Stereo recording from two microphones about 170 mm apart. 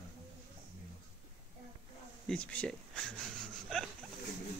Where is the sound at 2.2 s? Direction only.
5° left (ahead or behind).